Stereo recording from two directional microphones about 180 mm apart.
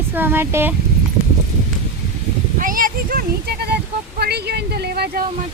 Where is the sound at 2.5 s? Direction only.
50° right (ahead or behind).